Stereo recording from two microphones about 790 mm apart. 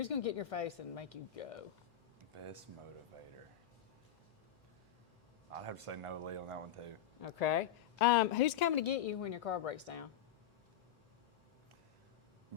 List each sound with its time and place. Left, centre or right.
0.0 s a woman's voice: left
2.3 s speech: right
5.5 s speech: right
7.2 s a woman's voice: left